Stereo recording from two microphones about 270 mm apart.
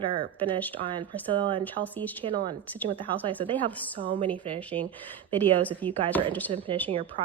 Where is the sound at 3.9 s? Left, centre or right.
Centre.